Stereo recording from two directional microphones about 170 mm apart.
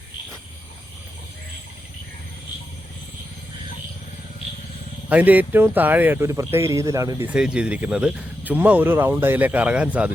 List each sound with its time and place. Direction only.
5.0 s speech: 10° right (ahead or behind)
7.3 s speech: 5° right (ahead or behind)